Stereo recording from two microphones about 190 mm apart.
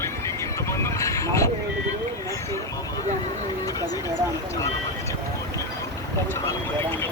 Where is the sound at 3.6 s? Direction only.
20° left (ahead or behind).